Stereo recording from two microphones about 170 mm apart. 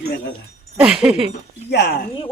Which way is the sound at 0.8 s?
5° right (ahead or behind).